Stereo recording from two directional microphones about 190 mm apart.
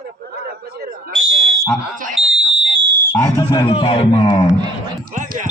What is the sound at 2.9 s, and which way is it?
Speech, 10° left (ahead or behind).